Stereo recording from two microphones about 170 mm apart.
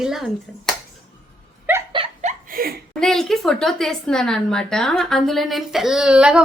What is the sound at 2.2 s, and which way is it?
Laughter, 55° right (ahead or behind).